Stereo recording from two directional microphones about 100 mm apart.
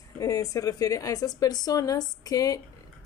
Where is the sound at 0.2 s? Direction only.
35° left (ahead or behind).